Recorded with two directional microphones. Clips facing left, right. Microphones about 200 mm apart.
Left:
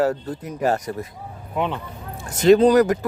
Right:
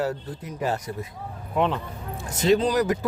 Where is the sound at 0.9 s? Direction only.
65° left (ahead or behind).